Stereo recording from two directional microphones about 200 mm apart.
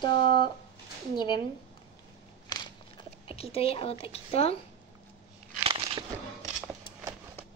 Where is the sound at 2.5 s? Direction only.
20° left (ahead or behind).